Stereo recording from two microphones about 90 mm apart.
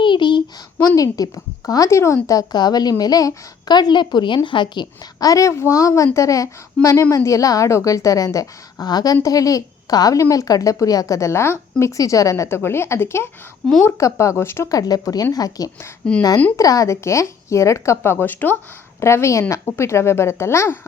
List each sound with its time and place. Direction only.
0.0 s a sound: 60° left (ahead or behind)
0.8 s a woman's voice: 40° left (ahead or behind); by 4.9 s 60° left (ahead or behind)
5.2 s a woman's voice: 40° left (ahead or behind)
14.7 s a woman's voice: 45° left (ahead or behind)
16.0 s speech: 10° left (ahead or behind)
16.6 s a woman's voice: 40° left (ahead or behind)